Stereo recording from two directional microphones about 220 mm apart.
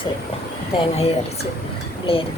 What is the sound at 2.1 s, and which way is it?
Speech, 25° left (ahead or behind).